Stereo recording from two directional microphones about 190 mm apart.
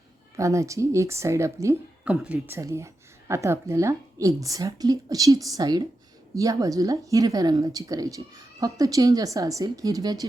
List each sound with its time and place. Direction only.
0.3 s a woman's voice: 15° right (ahead or behind)